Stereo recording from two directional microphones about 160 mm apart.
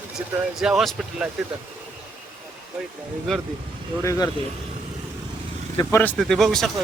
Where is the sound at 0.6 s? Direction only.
5° right (ahead or behind).